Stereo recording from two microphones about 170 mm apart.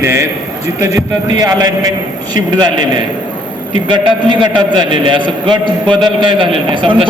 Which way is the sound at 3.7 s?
30° right (ahead or behind).